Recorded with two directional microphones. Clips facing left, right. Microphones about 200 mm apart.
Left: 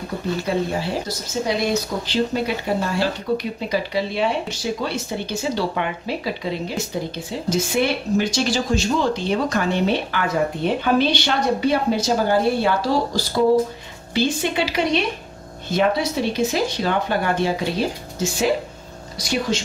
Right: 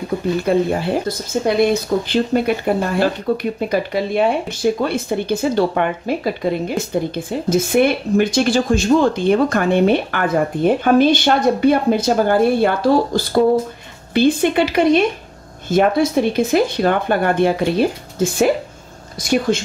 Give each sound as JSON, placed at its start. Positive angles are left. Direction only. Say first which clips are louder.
{"t": 0.4, "sound": "speech", "louder": "right 6 dB", "side_deg": -55}